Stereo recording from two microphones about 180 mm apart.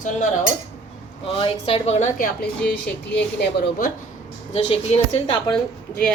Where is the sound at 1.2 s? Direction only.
30° left (ahead or behind).